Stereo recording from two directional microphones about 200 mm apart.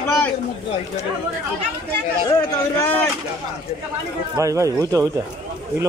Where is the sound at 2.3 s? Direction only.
10° left (ahead or behind).